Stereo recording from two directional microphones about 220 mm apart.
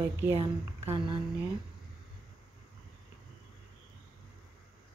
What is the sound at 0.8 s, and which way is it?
Speech, 30° right (ahead or behind).